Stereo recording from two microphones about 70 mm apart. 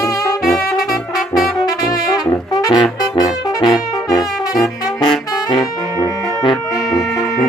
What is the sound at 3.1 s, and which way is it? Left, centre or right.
Brass instrument, left.